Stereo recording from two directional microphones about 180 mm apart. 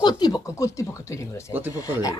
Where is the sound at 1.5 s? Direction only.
10° right (ahead or behind).